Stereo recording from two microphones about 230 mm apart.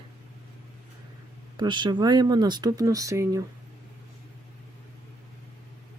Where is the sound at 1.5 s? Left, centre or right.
Centre.